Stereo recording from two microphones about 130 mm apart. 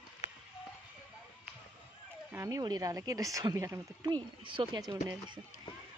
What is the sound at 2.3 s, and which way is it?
Speech, 25° right (ahead or behind).